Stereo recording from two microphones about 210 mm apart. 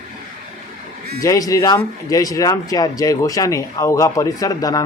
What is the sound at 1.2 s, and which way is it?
Speech, 15° left (ahead or behind).